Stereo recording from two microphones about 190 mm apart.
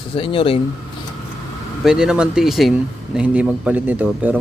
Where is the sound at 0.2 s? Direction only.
30° left (ahead or behind).